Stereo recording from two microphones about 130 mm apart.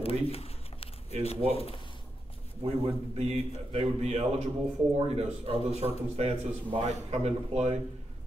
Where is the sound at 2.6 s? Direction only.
50° right (ahead or behind).